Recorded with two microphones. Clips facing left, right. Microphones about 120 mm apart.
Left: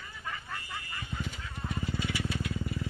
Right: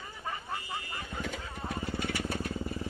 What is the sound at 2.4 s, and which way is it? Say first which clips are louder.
Vehicle: even; 30° right (ahead or behind).